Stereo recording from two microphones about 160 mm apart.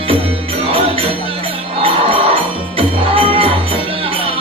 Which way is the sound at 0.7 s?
35° right (ahead or behind).